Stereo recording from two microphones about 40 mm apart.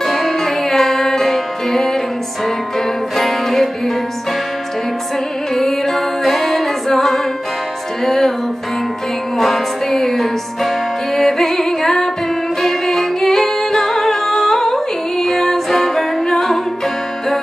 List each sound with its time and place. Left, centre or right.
0.0 s music: centre
3.2 s music: centre
5.5 s music: centre
9.4 s music: centre